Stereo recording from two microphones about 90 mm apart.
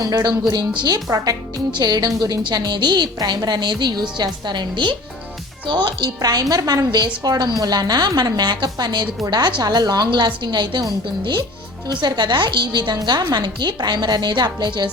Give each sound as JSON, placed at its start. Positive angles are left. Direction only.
{"t": 0.0, "sound": "a woman's voice", "side_deg": -45}